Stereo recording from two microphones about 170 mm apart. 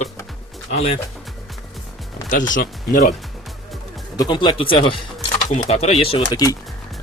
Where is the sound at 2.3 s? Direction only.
50° left (ahead or behind).